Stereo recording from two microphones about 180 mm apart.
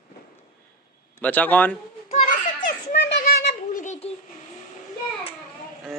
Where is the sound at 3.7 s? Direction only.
40° left (ahead or behind).